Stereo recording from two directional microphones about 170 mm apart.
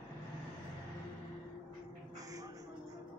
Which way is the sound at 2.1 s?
20° right (ahead or behind).